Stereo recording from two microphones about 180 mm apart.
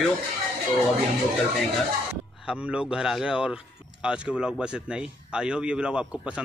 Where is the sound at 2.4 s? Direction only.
5° right (ahead or behind).